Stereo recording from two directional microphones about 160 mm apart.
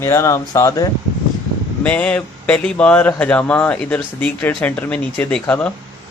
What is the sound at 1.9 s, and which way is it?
Speech, 10° left (ahead or behind).